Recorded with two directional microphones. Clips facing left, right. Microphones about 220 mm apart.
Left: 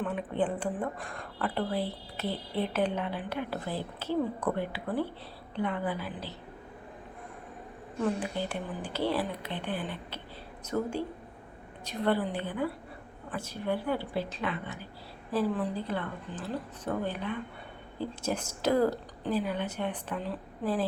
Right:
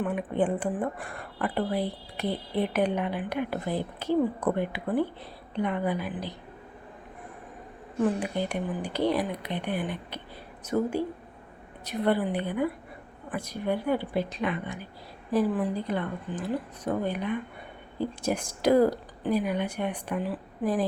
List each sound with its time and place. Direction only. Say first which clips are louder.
0.0 s a woman's voice: right 3 dB; 10° right (ahead or behind)
8.2 s a woman's voice: right 4 dB; 15° right (ahead or behind)
12.0 s a woman's voice: right 3 dB; 15° right (ahead or behind)